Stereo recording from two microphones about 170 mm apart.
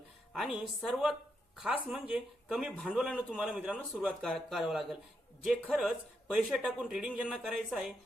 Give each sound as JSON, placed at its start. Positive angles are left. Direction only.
{"t": 0.3, "sound": "speech", "side_deg": 0}